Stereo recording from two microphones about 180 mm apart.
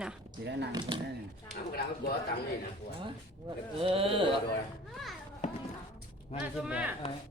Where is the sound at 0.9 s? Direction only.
25° right (ahead or behind).